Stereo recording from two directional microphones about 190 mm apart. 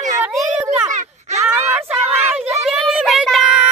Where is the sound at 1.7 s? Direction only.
10° right (ahead or behind).